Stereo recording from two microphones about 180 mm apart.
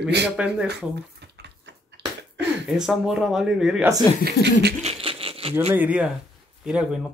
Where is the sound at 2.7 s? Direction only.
5° right (ahead or behind).